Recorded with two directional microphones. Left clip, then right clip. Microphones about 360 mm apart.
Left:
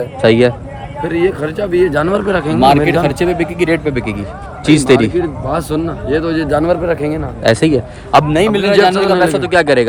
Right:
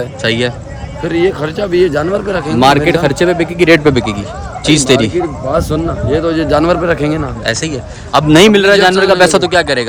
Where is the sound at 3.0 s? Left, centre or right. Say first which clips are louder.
Right 3 dB; centre.